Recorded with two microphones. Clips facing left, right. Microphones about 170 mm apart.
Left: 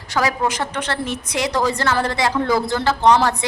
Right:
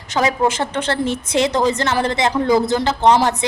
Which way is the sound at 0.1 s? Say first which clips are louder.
Right 3 dB; 20° right (ahead or behind).